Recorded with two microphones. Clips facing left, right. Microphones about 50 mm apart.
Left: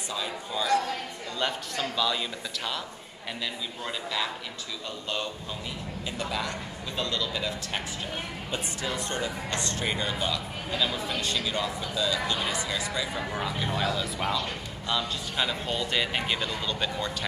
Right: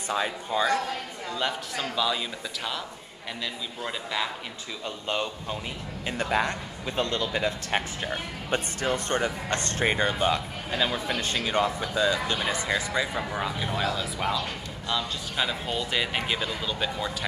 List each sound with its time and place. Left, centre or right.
0.5 s a man's voice: right
1.4 s speech: centre
3.8 s speech: centre
4.8 s a man's voice: right
6.0 s speech: right
13.3 s a man's voice: centre